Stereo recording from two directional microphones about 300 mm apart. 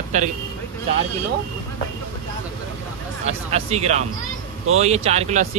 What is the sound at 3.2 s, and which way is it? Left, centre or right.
Speech, right.